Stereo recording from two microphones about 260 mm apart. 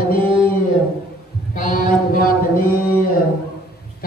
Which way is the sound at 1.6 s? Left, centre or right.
Left.